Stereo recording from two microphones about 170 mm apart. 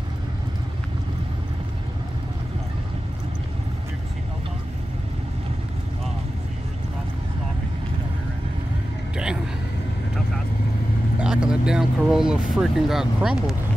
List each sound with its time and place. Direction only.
9.1 s vehicle: 5° right (ahead or behind)
11.1 s speech: 5° right (ahead or behind)